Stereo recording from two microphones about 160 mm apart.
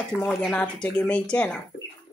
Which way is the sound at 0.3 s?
5° left (ahead or behind).